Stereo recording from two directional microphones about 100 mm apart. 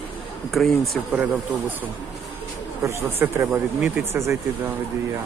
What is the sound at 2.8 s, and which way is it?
Speech, 25° right (ahead or behind).